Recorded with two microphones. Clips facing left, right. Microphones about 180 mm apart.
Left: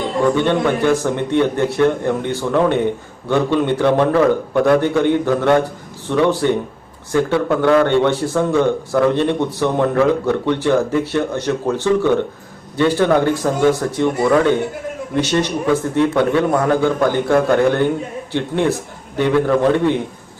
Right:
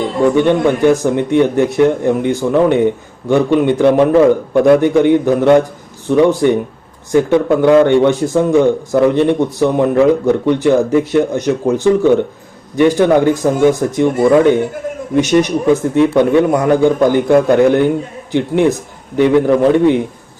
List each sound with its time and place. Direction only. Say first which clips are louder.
0.3 s speech: right 5 dB; 15° right (ahead or behind)
15.1 s speech: right 6 dB; 10° right (ahead or behind)